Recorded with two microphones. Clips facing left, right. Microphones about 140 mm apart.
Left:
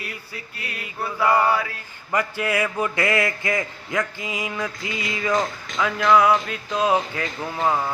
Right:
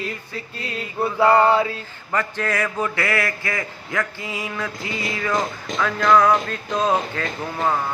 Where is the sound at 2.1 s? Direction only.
10° left (ahead or behind).